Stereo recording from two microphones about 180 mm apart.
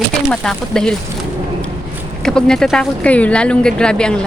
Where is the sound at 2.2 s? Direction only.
5° left (ahead or behind).